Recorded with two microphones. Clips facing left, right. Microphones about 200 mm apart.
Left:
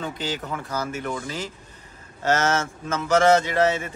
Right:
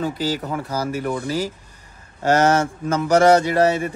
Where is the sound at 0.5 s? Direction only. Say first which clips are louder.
Right 5 dB; 35° right (ahead or behind).